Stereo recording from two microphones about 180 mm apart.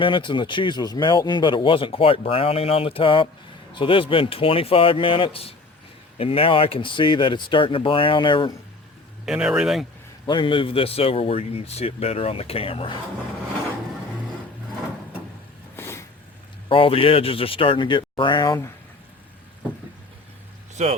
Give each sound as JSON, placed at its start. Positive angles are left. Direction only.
{"t": 0.0, "sound": "a man's voice", "side_deg": 25}
{"t": 9.2, "sound": "speech", "side_deg": -5}
{"t": 10.2, "sound": "a man's voice", "side_deg": 25}
{"t": 15.7, "sound": "a sound", "side_deg": 15}
{"t": 16.6, "sound": "speech", "side_deg": 30}
{"t": 20.8, "sound": "speech", "side_deg": -40}